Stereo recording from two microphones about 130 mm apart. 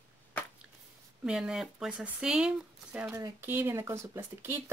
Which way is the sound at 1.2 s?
5° right (ahead or behind).